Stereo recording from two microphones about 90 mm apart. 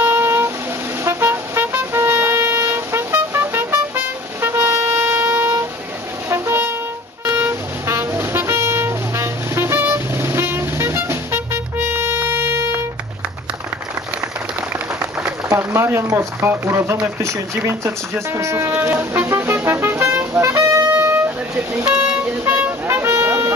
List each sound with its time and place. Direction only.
0.0 s music: 25° right (ahead or behind)
1.0 s vehicle: 25° right (ahead or behind)
6.2 s brass instrument: 30° right (ahead or behind)
7.3 s vehicle: 25° right (ahead or behind)
15.5 s a sound: 25° right (ahead or behind)
16.1 s speech: 30° right (ahead or behind)
17.2 s a sound: 30° right (ahead or behind)
20.9 s vehicle horn: 25° right (ahead or behind)
21.8 s vehicle: 10° right (ahead or behind)